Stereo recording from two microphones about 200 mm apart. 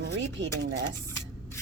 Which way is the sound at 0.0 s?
65° right (ahead or behind).